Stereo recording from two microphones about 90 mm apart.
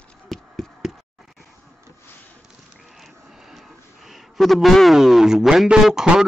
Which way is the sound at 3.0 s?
Centre (ahead or behind).